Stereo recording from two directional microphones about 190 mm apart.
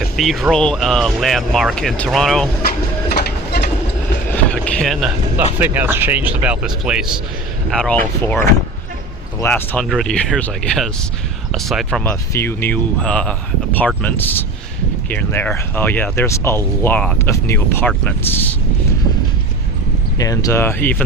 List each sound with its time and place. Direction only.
0.0 s speech: centre (ahead or behind)
3.1 s train: 60° left (ahead or behind)
4.3 s vehicle: 5° left (ahead or behind)
5.5 s speech: 10° right (ahead or behind)
12.3 s speech: 10° left (ahead or behind)
20.1 s speech: 20° left (ahead or behind)